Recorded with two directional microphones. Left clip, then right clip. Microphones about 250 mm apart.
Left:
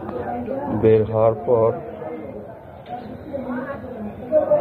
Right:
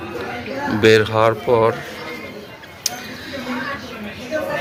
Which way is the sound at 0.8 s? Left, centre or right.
Centre.